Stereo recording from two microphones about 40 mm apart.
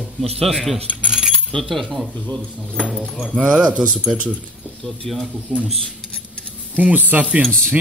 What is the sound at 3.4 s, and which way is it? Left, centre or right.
Speech, right.